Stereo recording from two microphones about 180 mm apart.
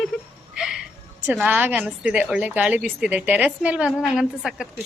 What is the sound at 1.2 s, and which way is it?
A woman's voice, 10° right (ahead or behind).